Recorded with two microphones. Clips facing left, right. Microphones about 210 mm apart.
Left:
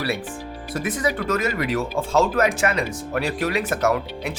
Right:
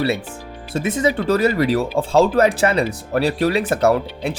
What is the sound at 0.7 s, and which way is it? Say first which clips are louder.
Speech: right 5 dB; 25° right (ahead or behind).